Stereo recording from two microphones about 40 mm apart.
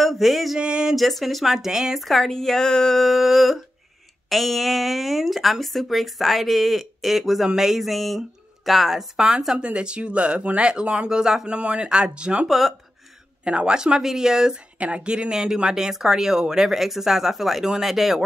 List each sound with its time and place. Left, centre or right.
0.0 s a sound: centre
0.6 s a sound: right
0.9 s speech: centre
2.0 s speech: centre
9.1 s speech: centre
9.6 s speech: right
11.4 s speech: right
12.4 s speech: centre
13.4 s speech: right
14.8 s speech: right; by 16.6 s centre
16.6 s speech: centre